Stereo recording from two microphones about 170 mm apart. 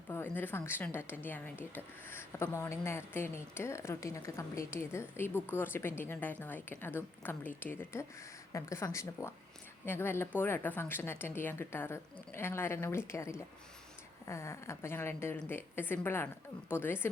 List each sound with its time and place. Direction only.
0.1 s a woman's voice: 10° left (ahead or behind)